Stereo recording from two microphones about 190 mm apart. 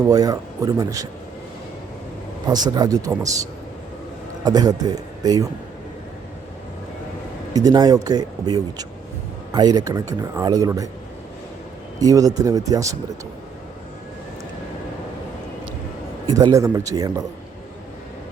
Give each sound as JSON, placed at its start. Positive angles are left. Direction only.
{"t": 0.1, "sound": "speech", "side_deg": -20}
{"t": 2.5, "sound": "speech", "side_deg": -20}
{"t": 4.4, "sound": "speech", "side_deg": -20}
{"t": 7.5, "sound": "speech", "side_deg": -20}
{"t": 11.9, "sound": "speech", "side_deg": -20}
{"t": 16.2, "sound": "speech", "side_deg": -20}